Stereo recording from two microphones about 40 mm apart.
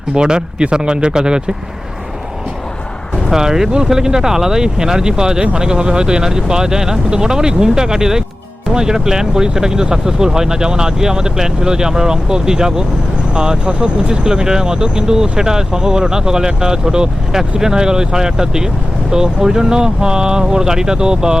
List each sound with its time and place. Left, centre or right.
0.1 s speech: right
3.3 s speech: centre